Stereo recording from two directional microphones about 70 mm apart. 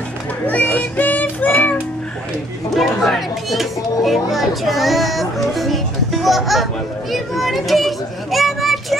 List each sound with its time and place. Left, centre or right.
0.5 s music: left
2.7 s speech: centre